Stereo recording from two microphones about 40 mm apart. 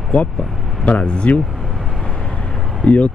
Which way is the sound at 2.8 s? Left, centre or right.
Left.